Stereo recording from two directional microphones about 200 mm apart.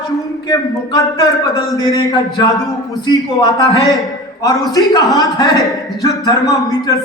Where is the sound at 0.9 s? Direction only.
15° left (ahead or behind).